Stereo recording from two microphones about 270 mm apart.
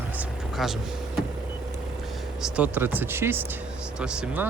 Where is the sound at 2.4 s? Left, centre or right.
Centre.